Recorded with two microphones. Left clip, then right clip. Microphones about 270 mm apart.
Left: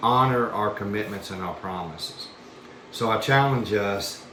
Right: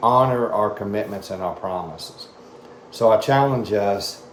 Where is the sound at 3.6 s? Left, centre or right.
Centre.